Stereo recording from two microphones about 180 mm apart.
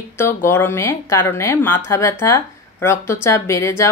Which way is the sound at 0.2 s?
15° left (ahead or behind).